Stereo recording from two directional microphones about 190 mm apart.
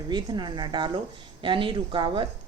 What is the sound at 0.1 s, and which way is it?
A woman's voice, 25° right (ahead or behind).